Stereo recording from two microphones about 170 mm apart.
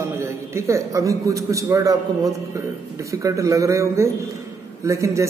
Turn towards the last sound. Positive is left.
turn(degrees=-15)  # may be behind; listen again after turning